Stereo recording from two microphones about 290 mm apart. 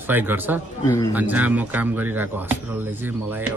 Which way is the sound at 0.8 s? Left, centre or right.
Centre.